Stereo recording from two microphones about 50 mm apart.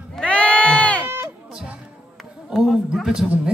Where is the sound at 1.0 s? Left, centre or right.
Right.